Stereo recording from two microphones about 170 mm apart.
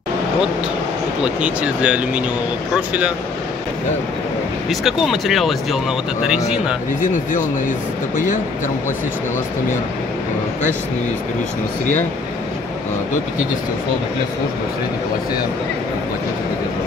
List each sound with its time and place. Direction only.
1.2 s speech: 5° right (ahead or behind)
4.6 s speech: centre (ahead or behind)